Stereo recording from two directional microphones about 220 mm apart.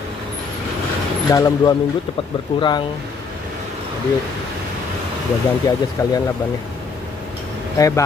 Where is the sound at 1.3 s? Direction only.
15° left (ahead or behind).